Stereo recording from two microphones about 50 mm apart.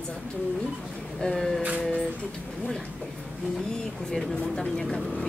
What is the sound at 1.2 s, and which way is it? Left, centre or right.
Speech, centre.